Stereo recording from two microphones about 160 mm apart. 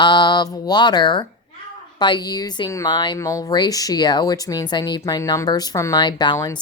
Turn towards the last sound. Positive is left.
turn(degrees=25)  # may be behind; listen again after turning